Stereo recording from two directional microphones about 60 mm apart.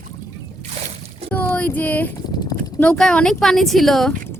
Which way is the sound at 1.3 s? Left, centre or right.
Left.